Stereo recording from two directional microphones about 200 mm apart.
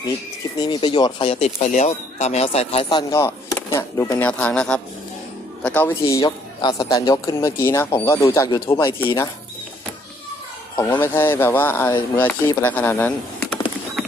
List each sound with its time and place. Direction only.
0.6 s a man's voice: 25° left (ahead or behind)
11.0 s a man's voice: 10° left (ahead or behind)